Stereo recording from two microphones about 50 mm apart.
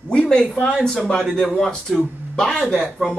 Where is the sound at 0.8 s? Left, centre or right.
Centre.